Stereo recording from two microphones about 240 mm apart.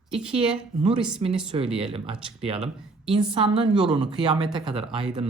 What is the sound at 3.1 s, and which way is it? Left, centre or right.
Speech, right.